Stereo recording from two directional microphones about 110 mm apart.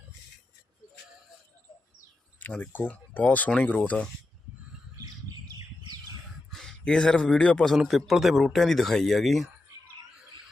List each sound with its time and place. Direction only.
2.4 s speech: 15° left (ahead or behind)
4.9 s squawk: 35° right (ahead or behind)
6.5 s a man's voice: 5° left (ahead or behind)